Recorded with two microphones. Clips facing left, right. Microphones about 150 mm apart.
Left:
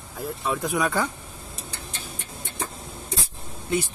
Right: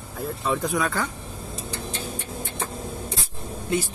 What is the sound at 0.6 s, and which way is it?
Speech, 15° left (ahead or behind).